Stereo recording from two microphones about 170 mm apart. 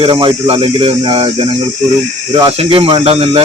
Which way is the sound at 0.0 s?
30° right (ahead or behind).